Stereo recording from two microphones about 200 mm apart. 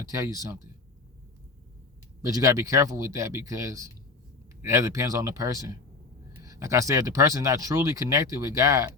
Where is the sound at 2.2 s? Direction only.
15° right (ahead or behind).